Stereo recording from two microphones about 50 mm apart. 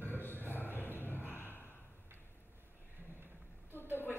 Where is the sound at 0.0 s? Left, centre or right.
Left.